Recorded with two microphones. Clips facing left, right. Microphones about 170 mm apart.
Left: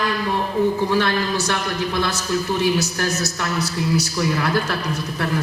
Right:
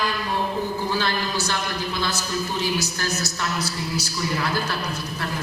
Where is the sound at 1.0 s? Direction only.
65° left (ahead or behind).